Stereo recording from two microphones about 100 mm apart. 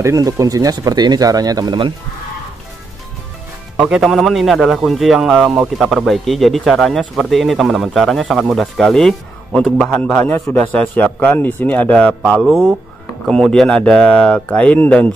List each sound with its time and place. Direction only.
0.0 s speech: 35° right (ahead or behind)
3.7 s a man's voice: 5° right (ahead or behind); by 15.0 s 10° left (ahead or behind)